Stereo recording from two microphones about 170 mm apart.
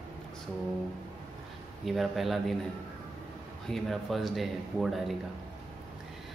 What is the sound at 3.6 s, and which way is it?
A man's voice, centre (ahead or behind).